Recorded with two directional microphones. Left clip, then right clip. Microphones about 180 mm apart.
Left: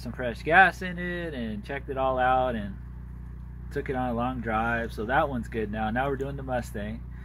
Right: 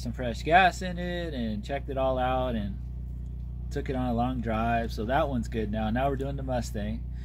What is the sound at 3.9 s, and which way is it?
Speech, 15° right (ahead or behind).